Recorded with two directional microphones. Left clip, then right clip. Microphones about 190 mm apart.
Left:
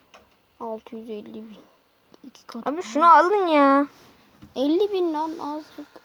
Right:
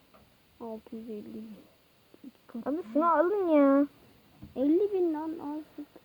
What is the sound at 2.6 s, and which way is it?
Speech, 35° left (ahead or behind).